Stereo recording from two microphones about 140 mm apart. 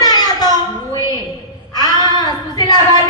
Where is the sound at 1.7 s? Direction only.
30° left (ahead or behind).